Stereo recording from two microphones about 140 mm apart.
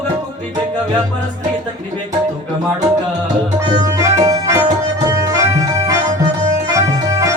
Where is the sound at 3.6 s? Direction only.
25° right (ahead or behind).